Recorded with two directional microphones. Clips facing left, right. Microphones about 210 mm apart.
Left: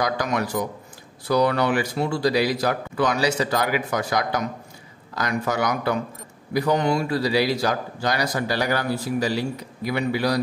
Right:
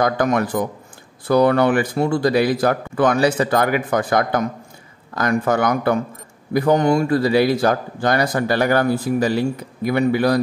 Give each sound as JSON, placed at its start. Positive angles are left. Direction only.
{"t": 0.0, "sound": "a man's voice", "side_deg": -50}